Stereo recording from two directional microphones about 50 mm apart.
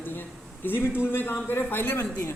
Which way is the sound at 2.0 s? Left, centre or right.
Left.